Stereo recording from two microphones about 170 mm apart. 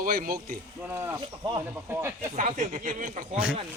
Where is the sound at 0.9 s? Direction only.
15° right (ahead or behind).